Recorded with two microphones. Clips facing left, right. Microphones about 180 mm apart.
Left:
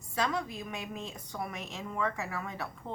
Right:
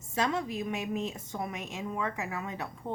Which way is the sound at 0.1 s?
25° right (ahead or behind).